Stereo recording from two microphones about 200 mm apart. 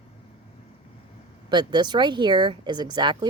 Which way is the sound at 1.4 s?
20° right (ahead or behind).